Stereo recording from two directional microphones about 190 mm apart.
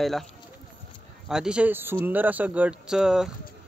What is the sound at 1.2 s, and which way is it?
A man's voice, 5° right (ahead or behind).